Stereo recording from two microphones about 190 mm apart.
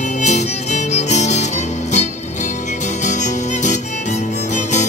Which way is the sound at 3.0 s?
40° left (ahead or behind).